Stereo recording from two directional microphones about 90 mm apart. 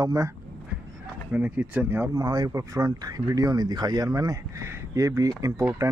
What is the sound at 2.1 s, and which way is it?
Speech, 50° right (ahead or behind).